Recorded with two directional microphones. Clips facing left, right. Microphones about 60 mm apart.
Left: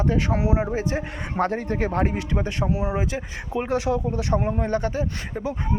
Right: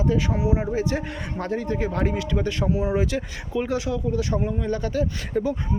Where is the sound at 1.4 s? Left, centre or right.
Left.